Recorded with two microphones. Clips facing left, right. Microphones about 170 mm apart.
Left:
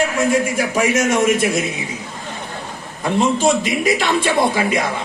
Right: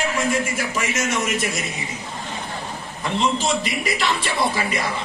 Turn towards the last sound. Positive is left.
turn(degrees=50)  # may be behind; listen again after turning